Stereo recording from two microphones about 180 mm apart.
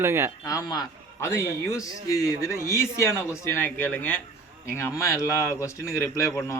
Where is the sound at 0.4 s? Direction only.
20° left (ahead or behind).